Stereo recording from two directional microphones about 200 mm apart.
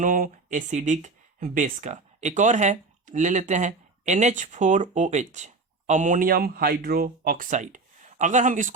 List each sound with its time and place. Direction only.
0.0 s speech: 40° right (ahead or behind)